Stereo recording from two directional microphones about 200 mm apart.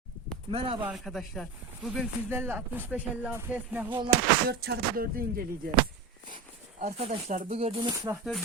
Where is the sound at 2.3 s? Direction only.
10° right (ahead or behind).